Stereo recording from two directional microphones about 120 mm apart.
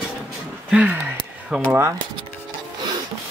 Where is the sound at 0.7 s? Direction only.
15° right (ahead or behind).